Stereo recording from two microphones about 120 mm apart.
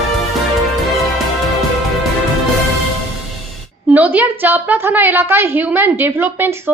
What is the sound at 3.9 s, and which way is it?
A woman's voice, 15° right (ahead or behind).